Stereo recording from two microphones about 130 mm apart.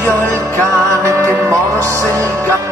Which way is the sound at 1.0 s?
20° right (ahead or behind).